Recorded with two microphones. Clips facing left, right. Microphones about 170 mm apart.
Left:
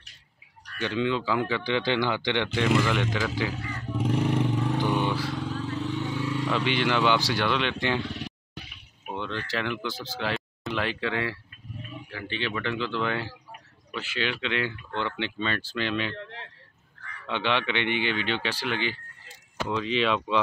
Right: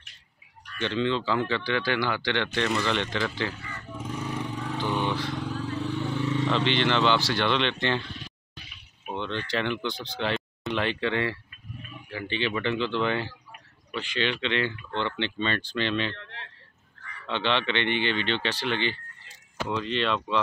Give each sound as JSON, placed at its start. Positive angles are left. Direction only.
{"t": 0.7, "sound": "speech", "side_deg": 10}
{"t": 4.0, "sound": "vehicle", "side_deg": 65}
{"t": 4.6, "sound": "vehicle", "side_deg": 15}
{"t": 5.9, "sound": "a sound", "side_deg": 15}
{"t": 6.2, "sound": "speech", "side_deg": 5}
{"t": 8.0, "sound": "a sound", "side_deg": 70}
{"t": 9.0, "sound": "speech", "side_deg": 5}
{"t": 17.3, "sound": "speech", "side_deg": 10}